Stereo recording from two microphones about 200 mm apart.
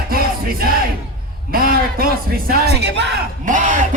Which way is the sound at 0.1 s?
50° right (ahead or behind).